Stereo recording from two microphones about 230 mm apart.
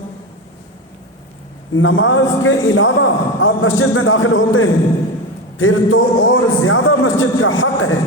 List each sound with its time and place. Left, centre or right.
1.7 s a man's voice: left